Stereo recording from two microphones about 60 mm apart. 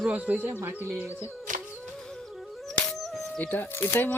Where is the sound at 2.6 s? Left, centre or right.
Centre.